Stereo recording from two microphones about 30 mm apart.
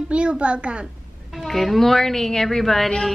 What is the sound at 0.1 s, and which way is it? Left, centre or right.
Speech, right.